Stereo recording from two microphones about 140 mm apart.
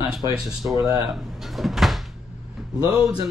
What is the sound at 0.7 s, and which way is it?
Speech, 25° right (ahead or behind).